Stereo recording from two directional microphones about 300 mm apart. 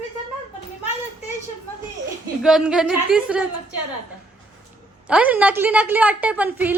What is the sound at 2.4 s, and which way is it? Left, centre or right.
A woman's voice, centre.